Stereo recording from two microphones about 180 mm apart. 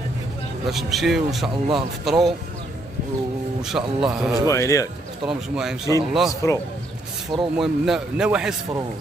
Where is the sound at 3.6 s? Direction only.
5° right (ahead or behind).